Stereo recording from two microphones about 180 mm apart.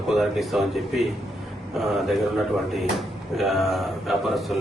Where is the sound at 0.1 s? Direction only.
Centre (ahead or behind).